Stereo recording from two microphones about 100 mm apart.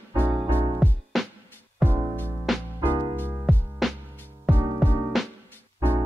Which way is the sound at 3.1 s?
20° right (ahead or behind).